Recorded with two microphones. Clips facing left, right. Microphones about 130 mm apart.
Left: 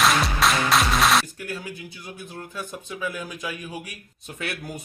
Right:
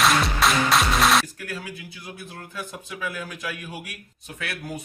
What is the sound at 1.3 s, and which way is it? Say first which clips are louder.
Speech: left 1 dB; 25° left (ahead or behind).